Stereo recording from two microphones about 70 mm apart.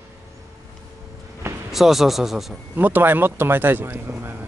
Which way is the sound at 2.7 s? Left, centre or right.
Right.